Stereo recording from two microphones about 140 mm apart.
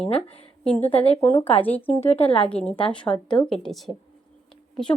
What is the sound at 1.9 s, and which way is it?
A woman's voice, 50° left (ahead or behind).